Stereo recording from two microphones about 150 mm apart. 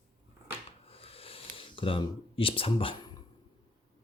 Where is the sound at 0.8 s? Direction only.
40° left (ahead or behind).